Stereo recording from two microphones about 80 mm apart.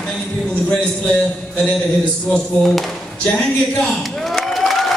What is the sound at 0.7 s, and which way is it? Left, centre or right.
Speech, centre.